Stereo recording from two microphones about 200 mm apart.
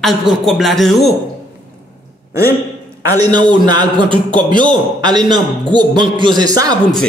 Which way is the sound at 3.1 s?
20° right (ahead or behind).